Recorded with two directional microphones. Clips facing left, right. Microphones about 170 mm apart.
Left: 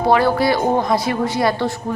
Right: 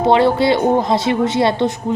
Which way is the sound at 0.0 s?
25° right (ahead or behind).